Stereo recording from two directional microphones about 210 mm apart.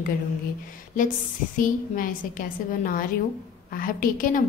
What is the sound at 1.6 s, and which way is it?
A woman's voice, 40° left (ahead or behind).